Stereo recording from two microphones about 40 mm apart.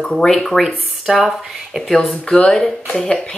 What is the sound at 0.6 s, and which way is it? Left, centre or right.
Speech, centre.